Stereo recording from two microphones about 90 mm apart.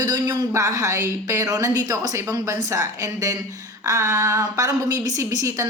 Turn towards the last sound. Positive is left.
turn(degrees=-35)  # may be behind; listen again after turning